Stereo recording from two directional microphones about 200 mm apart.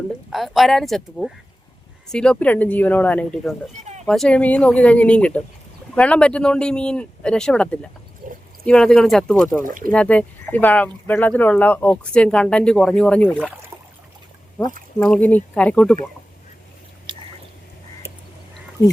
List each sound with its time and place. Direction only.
0.3 s speech: centre (ahead or behind)
3.8 s a sound: 35° right (ahead or behind)
4.0 s speech: 5° left (ahead or behind)
8.2 s a sound: 40° right (ahead or behind)
8.6 s speech: 5° left (ahead or behind)
9.6 s speech: 45° right (ahead or behind)
9.9 s speech: 5° left (ahead or behind)
13.7 s a sound: 15° right (ahead or behind)
14.9 s speech: 5° left (ahead or behind)
17.1 s squish: 25° right (ahead or behind)
18.8 s speech: 15° left (ahead or behind)